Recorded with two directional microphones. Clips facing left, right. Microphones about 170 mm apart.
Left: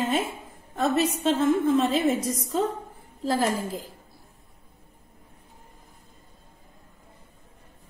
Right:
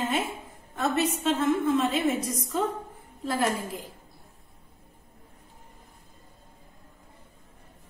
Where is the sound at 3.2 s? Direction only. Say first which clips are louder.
Left 3 dB; 30° left (ahead or behind).